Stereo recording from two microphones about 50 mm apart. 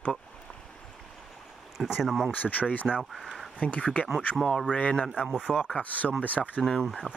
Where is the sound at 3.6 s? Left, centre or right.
Left.